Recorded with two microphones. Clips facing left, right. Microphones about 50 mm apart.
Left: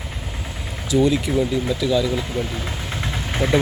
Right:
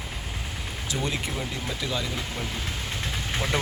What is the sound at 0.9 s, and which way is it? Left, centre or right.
Speech, right.